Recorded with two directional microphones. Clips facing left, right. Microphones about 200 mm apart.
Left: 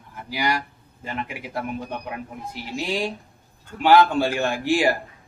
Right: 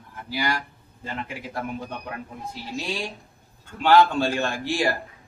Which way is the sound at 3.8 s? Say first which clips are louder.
Left 1 dB; 15° left (ahead or behind).